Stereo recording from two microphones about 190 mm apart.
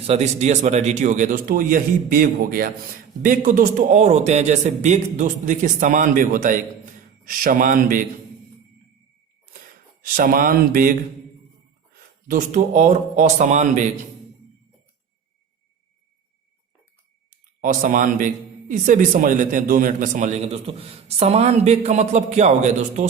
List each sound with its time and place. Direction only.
0.1 s a man's voice: 35° right (ahead or behind)
10.0 s speech: 50° right (ahead or behind)
12.3 s a man's voice: 40° right (ahead or behind)
17.6 s a man's voice: 45° right (ahead or behind)